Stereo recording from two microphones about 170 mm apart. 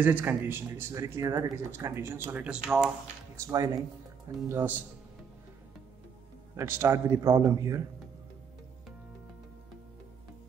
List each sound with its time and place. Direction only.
0.0 s speech: 10° right (ahead or behind)
3.3 s speech: 20° right (ahead or behind)
6.5 s speech: 15° right (ahead or behind)